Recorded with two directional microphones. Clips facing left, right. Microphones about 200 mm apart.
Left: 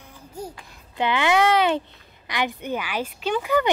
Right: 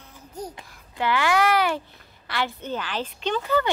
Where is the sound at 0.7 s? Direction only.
20° left (ahead or behind).